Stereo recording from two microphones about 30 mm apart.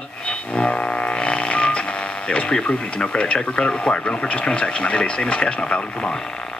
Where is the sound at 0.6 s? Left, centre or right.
Left.